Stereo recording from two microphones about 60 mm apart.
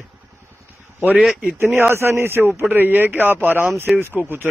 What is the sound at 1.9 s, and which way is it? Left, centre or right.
Speech, right.